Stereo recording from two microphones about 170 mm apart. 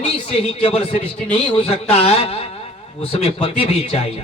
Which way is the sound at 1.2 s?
5° left (ahead or behind).